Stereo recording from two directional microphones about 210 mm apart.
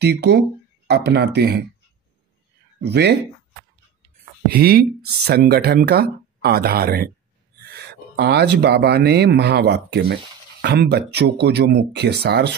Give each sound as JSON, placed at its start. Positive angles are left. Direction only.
{"t": 0.0, "sound": "speech", "side_deg": -50}
{"t": 2.8, "sound": "speech", "side_deg": -50}
{"t": 4.6, "sound": "speech", "side_deg": -45}